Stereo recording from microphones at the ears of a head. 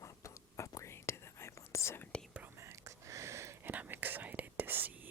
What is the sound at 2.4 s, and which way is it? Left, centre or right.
Whispering, right.